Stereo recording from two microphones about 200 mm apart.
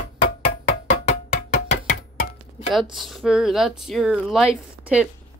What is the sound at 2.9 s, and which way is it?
Speech, centre (ahead or behind).